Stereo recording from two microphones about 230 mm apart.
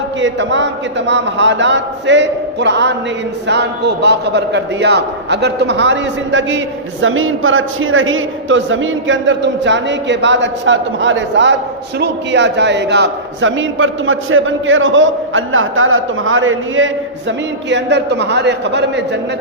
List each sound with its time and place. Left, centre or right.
0.2 s a man's voice: right